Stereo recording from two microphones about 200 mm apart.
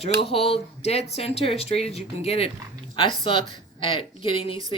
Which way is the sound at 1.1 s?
30° left (ahead or behind).